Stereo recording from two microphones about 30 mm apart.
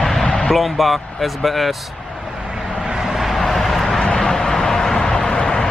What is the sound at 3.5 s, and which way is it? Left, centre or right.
Vehicle, centre.